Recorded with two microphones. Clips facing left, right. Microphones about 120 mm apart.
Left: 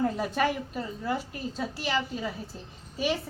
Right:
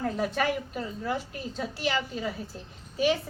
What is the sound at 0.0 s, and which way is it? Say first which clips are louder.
A woman's voice: left 1 dB; centre (ahead or behind).